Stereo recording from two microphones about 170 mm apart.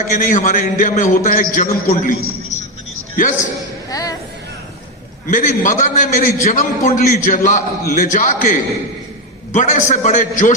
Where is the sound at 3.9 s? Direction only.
20° left (ahead or behind).